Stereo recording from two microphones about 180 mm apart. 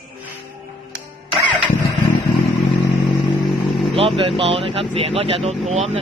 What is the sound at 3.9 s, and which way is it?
Speech, 30° right (ahead or behind).